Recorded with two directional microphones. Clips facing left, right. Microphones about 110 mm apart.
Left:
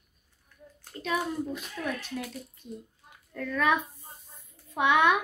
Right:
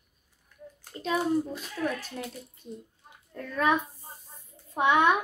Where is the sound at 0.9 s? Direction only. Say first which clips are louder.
Right 4 dB; 35° right (ahead or behind).